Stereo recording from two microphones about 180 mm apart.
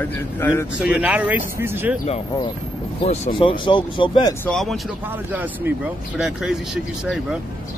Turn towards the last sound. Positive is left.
turn(degrees=-5)  # may be behind; listen again after turning